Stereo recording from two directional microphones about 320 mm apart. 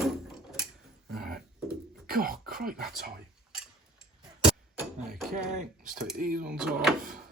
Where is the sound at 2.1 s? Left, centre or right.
Right.